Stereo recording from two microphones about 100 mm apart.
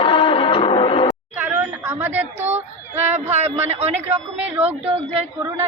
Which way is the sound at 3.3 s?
90° right.